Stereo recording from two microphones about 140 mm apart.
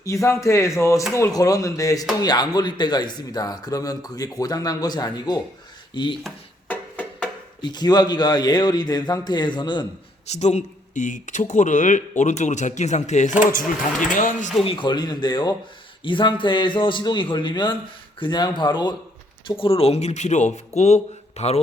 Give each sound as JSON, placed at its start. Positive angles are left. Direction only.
{"t": 0.0, "sound": "speech", "side_deg": 20}
{"t": 6.7, "sound": "music", "side_deg": 10}
{"t": 7.6, "sound": "a man's voice", "side_deg": 30}
{"t": 10.2, "sound": "speech", "side_deg": 55}
{"t": 14.1, "sound": "speech", "side_deg": 70}
{"t": 14.6, "sound": "a man's voice", "side_deg": 40}